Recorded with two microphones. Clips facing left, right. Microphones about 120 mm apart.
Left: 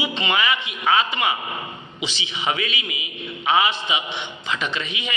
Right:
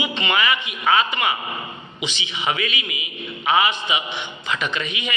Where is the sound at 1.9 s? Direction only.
35° left (ahead or behind).